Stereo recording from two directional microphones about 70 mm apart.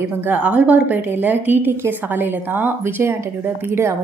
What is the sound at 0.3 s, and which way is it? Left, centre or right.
A woman's voice, centre.